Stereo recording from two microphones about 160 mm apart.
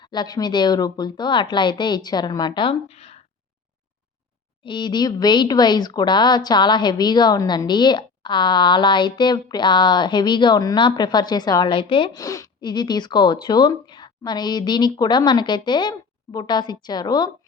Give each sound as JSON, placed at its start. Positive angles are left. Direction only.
{"t": 0.0, "sound": "speech", "side_deg": 25}
{"t": 2.9, "sound": "speech", "side_deg": 40}
{"t": 4.6, "sound": "speech", "side_deg": 30}